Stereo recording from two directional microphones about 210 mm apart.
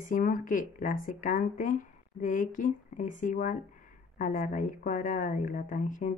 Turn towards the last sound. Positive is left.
turn(degrees=40)  # may be behind; listen again after turning